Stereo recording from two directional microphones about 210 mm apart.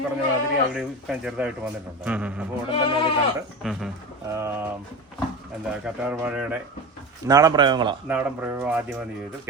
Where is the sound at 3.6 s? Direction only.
Centre (ahead or behind).